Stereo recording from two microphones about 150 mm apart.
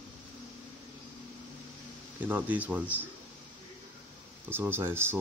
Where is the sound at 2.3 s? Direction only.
10° right (ahead or behind).